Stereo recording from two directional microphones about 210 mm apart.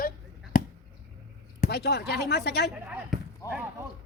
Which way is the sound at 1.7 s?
50° left (ahead or behind).